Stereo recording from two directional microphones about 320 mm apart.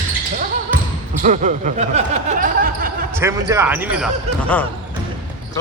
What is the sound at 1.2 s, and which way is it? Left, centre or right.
Speech, right.